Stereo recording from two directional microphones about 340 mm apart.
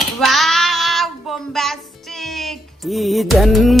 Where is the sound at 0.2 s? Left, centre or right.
Centre.